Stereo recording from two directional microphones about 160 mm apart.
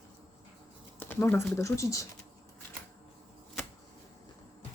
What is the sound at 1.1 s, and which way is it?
Speech, 10° left (ahead or behind).